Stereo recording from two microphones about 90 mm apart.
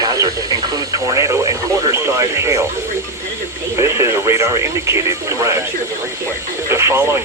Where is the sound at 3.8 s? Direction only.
30° right (ahead or behind).